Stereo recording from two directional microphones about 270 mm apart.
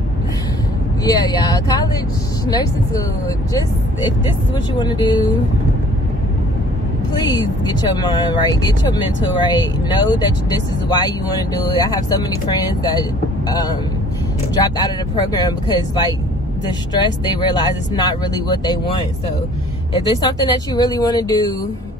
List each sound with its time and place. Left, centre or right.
1.0 s speech: centre
4.7 s speech: centre
7.2 s speech: centre
15.4 s speech: centre
20.1 s speech: centre